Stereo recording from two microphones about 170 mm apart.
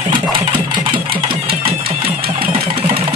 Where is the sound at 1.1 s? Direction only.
60° right (ahead or behind).